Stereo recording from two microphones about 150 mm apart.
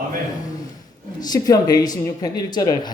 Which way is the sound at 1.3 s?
25° left (ahead or behind).